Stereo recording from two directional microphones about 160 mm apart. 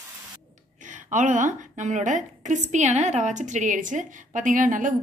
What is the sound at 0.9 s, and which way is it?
A woman's voice, 50° right (ahead or behind).